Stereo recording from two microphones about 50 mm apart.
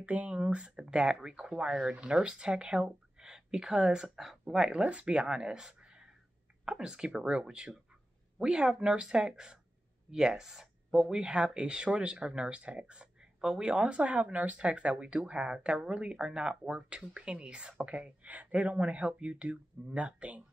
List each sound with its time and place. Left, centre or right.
0.0 s speech: right